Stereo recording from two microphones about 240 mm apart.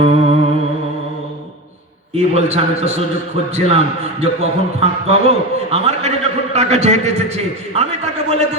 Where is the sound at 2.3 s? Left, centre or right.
Right.